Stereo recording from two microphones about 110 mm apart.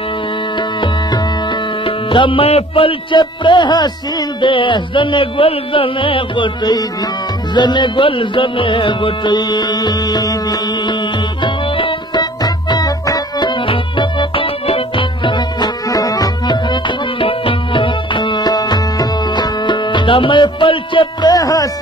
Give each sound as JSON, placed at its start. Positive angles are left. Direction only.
{"t": 1.9, "sound": "music", "side_deg": 50}
{"t": 11.4, "sound": "music", "side_deg": 50}
{"t": 13.7, "sound": "music", "side_deg": 55}
{"t": 17.2, "sound": "music", "side_deg": 55}